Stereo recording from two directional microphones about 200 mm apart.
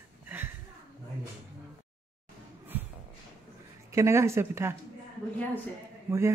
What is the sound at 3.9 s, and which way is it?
Speech, 15° right (ahead or behind).